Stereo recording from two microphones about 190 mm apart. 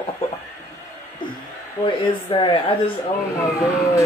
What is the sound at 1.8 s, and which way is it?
Speech, 25° left (ahead or behind).